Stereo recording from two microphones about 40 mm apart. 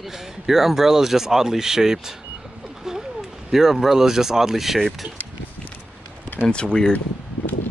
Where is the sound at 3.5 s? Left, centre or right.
Centre.